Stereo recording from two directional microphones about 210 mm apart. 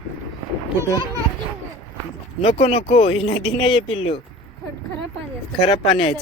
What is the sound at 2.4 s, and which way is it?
Speech, 30° left (ahead or behind).